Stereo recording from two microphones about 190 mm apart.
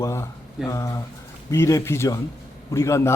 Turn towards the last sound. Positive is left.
turn(degrees=15)  # may be behind; listen again after turning